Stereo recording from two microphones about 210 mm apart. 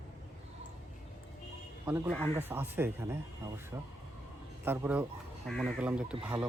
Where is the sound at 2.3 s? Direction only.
10° right (ahead or behind).